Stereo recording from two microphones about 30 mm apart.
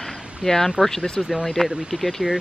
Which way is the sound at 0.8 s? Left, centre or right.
Right.